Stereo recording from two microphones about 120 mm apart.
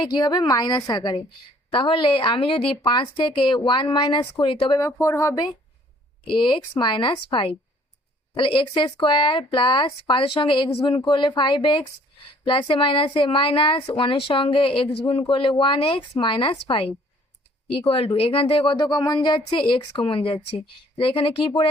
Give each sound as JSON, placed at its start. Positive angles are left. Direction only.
{"t": 0.1, "sound": "a woman's voice", "side_deg": 35}
{"t": 4.8, "sound": "speech", "side_deg": 20}
{"t": 6.2, "sound": "a woman's voice", "side_deg": 40}